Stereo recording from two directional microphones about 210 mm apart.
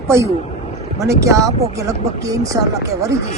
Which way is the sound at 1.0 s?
15° right (ahead or behind).